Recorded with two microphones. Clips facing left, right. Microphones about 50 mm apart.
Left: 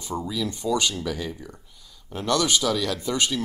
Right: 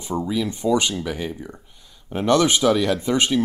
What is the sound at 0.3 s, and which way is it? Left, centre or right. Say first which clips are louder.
Speech: right 5 dB; right.